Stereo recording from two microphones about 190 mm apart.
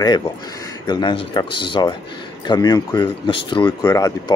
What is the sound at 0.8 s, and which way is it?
Speech, 25° left (ahead or behind).